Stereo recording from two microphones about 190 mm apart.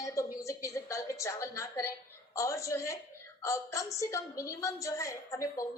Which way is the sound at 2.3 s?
15° left (ahead or behind).